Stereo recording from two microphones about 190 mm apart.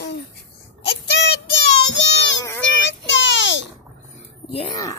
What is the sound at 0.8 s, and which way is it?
Child singing, 60° left (ahead or behind).